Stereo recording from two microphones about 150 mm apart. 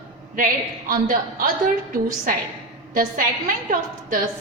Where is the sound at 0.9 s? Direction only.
65° right (ahead or behind).